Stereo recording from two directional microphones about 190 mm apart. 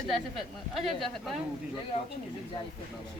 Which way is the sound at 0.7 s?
Centre (ahead or behind).